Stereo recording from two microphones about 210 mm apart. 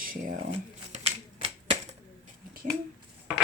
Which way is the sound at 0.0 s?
40° right (ahead or behind).